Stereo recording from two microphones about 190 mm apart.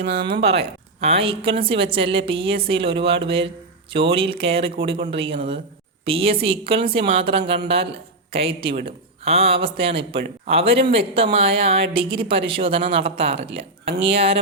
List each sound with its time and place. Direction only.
0.0 s speech: 60° right (ahead or behind)
0.4 s speech: 30° right (ahead or behind)